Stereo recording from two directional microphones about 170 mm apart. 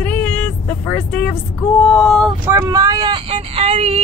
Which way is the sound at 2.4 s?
15° right (ahead or behind).